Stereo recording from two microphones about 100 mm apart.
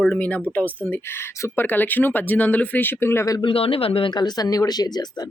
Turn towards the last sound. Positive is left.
turn(degrees=40)  # may be behind; listen again after turning